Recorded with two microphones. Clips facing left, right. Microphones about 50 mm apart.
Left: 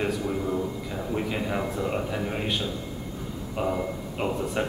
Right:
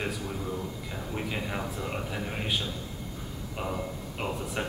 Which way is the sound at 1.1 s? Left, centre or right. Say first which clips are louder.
Left 5 dB; centre.